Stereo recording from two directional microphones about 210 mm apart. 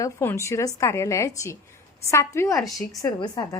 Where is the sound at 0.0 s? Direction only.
10° left (ahead or behind).